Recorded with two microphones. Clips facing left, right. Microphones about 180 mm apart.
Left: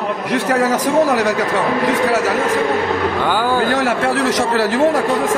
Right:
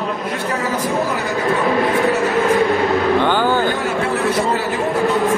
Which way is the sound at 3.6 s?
90° left.